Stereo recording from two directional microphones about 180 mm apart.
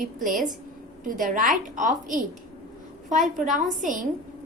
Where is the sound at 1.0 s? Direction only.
45° right (ahead or behind).